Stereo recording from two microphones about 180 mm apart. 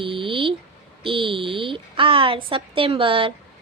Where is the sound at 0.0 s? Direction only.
30° right (ahead or behind).